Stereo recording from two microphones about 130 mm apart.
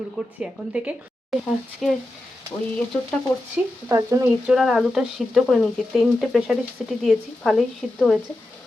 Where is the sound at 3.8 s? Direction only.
20° right (ahead or behind).